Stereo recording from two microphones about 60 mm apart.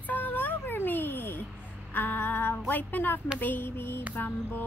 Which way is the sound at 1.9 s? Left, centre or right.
Left.